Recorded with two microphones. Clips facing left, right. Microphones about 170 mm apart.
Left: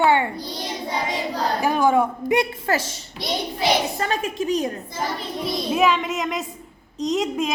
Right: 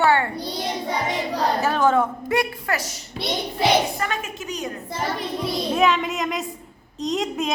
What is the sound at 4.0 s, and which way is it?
Speech, 30° left (ahead or behind).